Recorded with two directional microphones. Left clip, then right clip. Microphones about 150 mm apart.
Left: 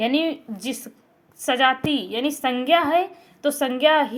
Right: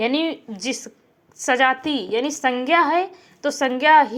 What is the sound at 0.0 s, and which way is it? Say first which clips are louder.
A woman's voice: even; 25° right (ahead or behind).